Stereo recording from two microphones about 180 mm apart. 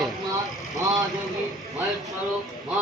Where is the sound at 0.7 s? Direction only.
20° right (ahead or behind).